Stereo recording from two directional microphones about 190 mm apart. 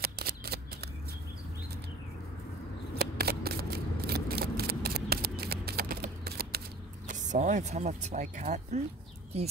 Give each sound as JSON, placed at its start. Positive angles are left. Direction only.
{"t": 0.0, "sound": "shuffling cards", "side_deg": -55}
{"t": 3.0, "sound": "scissors", "side_deg": -55}
{"t": 6.2, "sound": "shuffling cards", "side_deg": -55}
{"t": 7.1, "sound": "speech", "side_deg": -40}